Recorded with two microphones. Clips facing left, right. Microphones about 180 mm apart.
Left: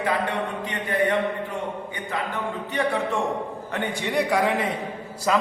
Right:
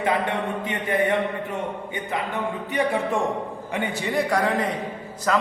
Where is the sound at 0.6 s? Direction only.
20° right (ahead or behind).